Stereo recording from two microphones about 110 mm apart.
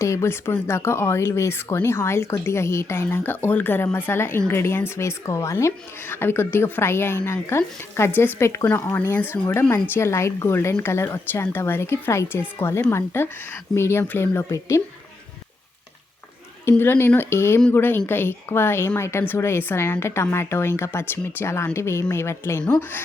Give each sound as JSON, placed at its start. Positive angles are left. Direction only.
{"t": 0.0, "sound": "a woman's voice", "side_deg": 25}
{"t": 16.6, "sound": "a woman's voice", "side_deg": 20}